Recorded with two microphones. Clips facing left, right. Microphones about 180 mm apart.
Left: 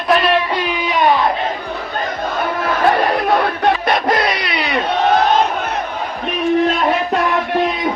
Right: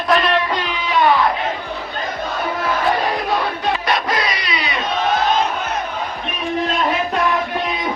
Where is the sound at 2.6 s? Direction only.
60° left (ahead or behind).